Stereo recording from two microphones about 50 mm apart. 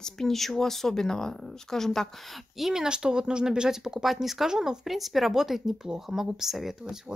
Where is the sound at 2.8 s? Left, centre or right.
Centre.